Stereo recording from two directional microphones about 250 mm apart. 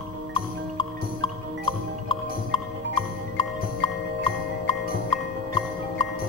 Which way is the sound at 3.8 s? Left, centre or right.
Centre.